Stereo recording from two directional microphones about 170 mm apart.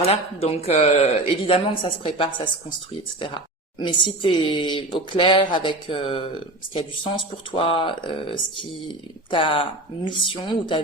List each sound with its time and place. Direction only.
0.0 s speech: 35° left (ahead or behind)